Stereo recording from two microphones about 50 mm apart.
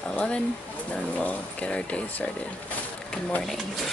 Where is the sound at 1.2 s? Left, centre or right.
Left.